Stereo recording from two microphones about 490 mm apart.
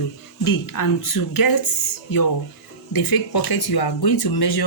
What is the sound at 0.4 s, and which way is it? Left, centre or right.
Speech, left.